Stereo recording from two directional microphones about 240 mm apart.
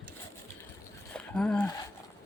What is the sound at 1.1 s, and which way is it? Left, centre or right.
Speech, centre.